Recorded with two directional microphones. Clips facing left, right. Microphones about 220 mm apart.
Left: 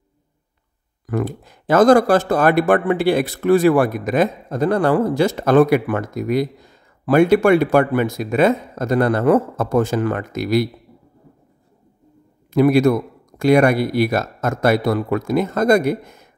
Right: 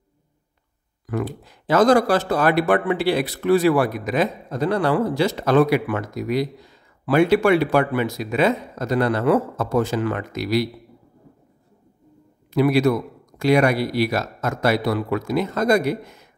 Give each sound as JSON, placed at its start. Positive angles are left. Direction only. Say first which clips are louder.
{"t": 1.0, "sound": "speech", "louder": "left 3 dB", "side_deg": 50}
{"t": 12.5, "sound": "speech", "louder": "left 4 dB", "side_deg": 45}